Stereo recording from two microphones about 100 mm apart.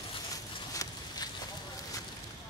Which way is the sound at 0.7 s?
40° left (ahead or behind).